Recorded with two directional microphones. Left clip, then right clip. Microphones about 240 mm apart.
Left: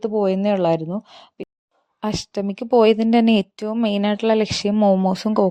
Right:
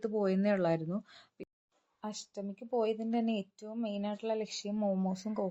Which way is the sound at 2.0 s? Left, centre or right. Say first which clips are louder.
Left 17 dB; left.